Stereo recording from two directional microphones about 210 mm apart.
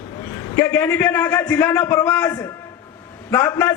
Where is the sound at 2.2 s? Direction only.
15° left (ahead or behind).